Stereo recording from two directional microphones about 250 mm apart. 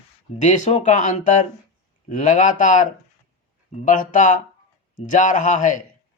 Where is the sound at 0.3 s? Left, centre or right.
Left.